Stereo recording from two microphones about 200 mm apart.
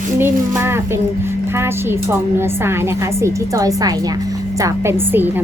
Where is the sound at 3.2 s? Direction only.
15° right (ahead or behind).